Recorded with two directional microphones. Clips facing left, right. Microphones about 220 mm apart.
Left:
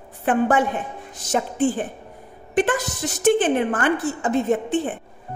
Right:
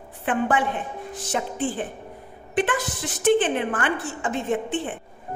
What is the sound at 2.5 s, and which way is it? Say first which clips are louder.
A woman's voice: left 3 dB; 45° left (ahead or behind).